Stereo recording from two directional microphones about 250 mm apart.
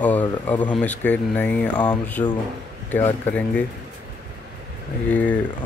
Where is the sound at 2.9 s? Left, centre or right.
Centre.